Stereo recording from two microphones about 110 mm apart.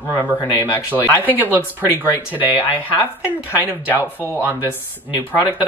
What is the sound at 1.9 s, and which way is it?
Speech, 20° left (ahead or behind).